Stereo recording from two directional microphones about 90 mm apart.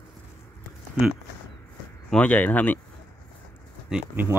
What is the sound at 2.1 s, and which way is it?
Speech, 15° left (ahead or behind).